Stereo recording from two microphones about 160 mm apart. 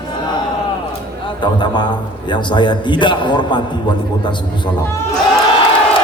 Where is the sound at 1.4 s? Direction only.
30° left (ahead or behind).